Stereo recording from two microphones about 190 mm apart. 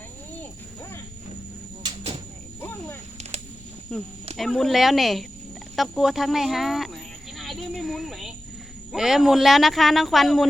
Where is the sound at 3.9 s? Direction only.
5° left (ahead or behind).